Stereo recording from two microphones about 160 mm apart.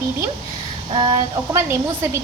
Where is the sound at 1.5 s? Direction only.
15° right (ahead or behind).